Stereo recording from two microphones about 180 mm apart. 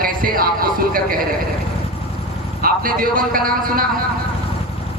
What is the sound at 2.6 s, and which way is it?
A man's voice, 50° right (ahead or behind).